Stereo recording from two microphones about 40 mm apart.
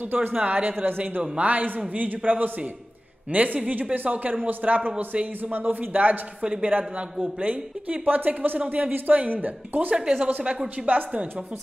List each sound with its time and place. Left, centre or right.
0.4 s a man's voice: right
1.3 s a man's voice: right
6.6 s a man's voice: right
9.9 s a woman's voice: right
10.8 s a woman's voice: centre